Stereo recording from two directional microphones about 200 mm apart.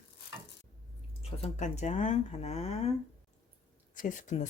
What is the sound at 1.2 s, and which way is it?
Speech, 35° left (ahead or behind).